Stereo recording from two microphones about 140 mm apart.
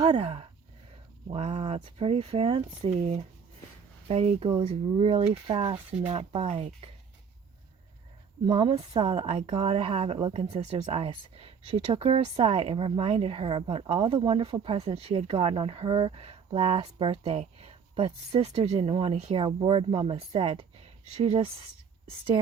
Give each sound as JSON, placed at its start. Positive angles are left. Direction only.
{"t": 0.0, "sound": "a woman's voice", "side_deg": -35}
{"t": 8.4, "sound": "a woman's voice", "side_deg": -40}